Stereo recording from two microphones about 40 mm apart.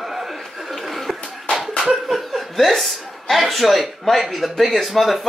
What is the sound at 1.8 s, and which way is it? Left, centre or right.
Speech, centre.